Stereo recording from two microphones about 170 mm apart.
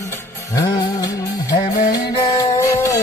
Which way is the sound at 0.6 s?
20° left (ahead or behind).